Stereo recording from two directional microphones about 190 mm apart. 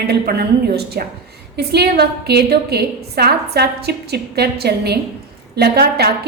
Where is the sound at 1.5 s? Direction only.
60° right (ahead or behind).